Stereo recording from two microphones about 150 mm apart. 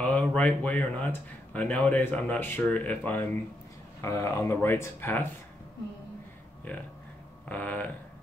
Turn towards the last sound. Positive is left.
turn(degrees=10)  # may be behind; listen again after turning